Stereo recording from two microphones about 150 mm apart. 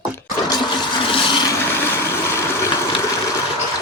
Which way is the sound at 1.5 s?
15° left (ahead or behind).